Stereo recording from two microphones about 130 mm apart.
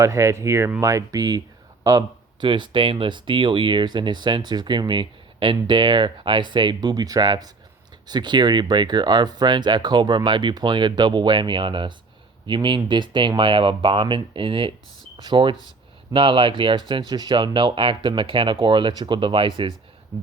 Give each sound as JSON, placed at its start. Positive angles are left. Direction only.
{"t": 0.0, "sound": "speech", "side_deg": -20}
{"t": 1.8, "sound": "a sound", "side_deg": -25}
{"t": 2.5, "sound": "speech", "side_deg": -40}